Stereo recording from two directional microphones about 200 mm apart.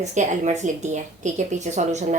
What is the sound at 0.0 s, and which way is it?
A woman's voice, 35° right (ahead or behind).